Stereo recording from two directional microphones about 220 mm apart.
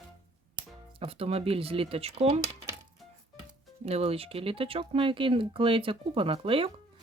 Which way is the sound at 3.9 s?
30° right (ahead or behind).